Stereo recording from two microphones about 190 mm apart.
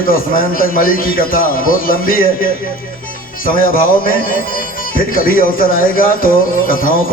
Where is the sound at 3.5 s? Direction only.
45° left (ahead or behind).